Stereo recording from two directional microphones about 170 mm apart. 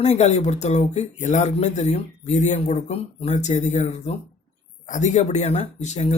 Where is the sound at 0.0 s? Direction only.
40° left (ahead or behind).